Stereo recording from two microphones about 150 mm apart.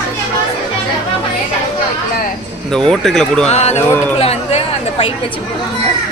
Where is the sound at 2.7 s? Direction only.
5° left (ahead or behind).